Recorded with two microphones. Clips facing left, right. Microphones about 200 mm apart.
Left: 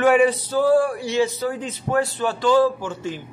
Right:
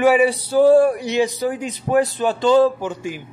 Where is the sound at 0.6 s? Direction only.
20° right (ahead or behind).